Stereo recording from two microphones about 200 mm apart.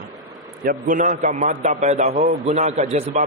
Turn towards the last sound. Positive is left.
turn(degrees=-30)  # may be behind; listen again after turning